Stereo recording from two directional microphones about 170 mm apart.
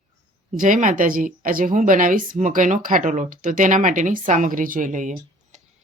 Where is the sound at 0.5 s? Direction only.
50° right (ahead or behind).